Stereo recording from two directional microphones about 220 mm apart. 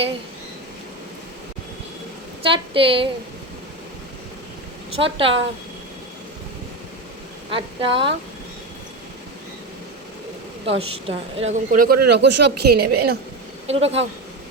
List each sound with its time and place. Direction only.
2.4 s a woman's voice: 25° right (ahead or behind)
4.9 s a woman's voice: 25° right (ahead or behind)
7.5 s a woman's voice: 25° right (ahead or behind)
10.7 s a woman's voice: 25° right (ahead or behind); by 13.1 s 45° right (ahead or behind)
13.7 s a woman's voice: 30° right (ahead or behind)